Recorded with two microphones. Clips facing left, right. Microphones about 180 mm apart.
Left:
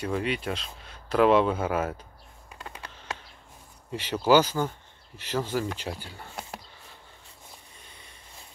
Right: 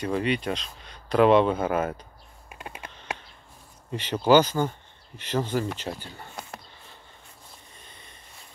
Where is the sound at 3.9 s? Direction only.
10° left (ahead or behind).